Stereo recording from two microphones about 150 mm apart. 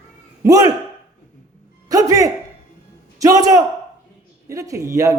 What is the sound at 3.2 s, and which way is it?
Speech, 25° right (ahead or behind).